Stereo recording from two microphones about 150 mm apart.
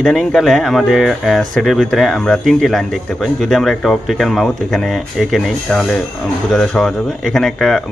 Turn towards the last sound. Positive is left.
turn(degrees=0)  # may be behind; listen again after turning